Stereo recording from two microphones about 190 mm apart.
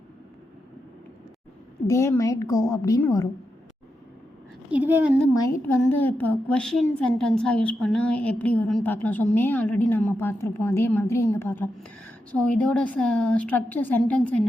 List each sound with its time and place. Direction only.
1.9 s a woman's voice: 15° left (ahead or behind)
4.7 s a woman's voice: 10° right (ahead or behind)
5.6 s a woman's voice: 10° left (ahead or behind)